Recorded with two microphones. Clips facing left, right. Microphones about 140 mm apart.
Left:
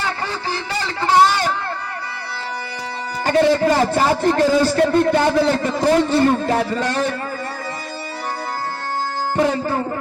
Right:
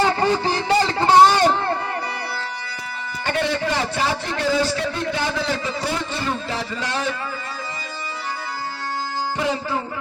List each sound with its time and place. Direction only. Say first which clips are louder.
0.0 s a sound: right 7 dB; 25° right (ahead or behind)
3.2 s a man's voice: left 8 dB; 40° left (ahead or behind)
9.4 s a man's voice: left 7 dB; 50° left (ahead or behind)